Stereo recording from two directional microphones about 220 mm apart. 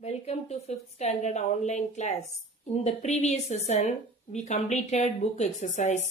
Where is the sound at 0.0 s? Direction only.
30° left (ahead or behind).